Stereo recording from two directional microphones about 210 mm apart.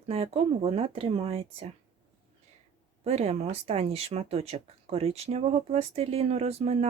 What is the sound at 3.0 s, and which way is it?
Speech, 30° right (ahead or behind).